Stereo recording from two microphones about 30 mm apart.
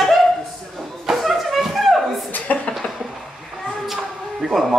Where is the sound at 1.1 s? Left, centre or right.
Centre.